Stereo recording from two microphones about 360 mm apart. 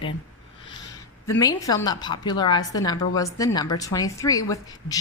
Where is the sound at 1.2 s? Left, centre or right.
Centre.